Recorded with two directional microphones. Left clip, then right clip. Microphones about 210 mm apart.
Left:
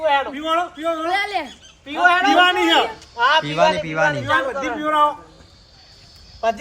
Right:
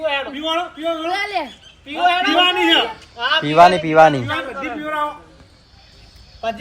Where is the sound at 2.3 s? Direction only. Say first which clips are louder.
Even; 10° left (ahead or behind).